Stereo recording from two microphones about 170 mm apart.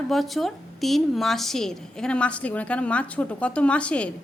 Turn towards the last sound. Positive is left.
turn(degrees=5)  # may be behind; listen again after turning